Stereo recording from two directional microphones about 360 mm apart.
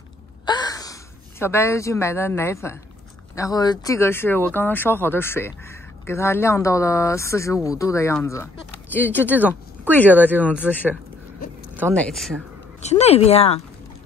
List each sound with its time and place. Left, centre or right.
0.5 s gasp: centre
1.4 s speech: centre
12.8 s speech: centre